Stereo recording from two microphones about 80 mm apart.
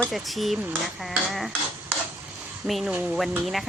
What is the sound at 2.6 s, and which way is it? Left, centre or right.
Speech, centre.